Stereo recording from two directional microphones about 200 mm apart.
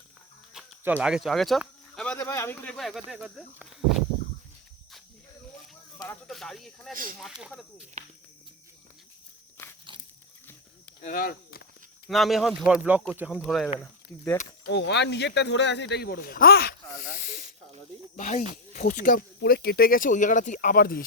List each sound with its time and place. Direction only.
0.5 s speech: 5° right (ahead or behind)
6.2 s speech: centre (ahead or behind)
11.0 s a sound: 45° left (ahead or behind)
12.0 s speech: centre (ahead or behind)
14.7 s speech: 60° left (ahead or behind)
17.2 s snake: 40° left (ahead or behind)
18.2 s speech: 40° left (ahead or behind)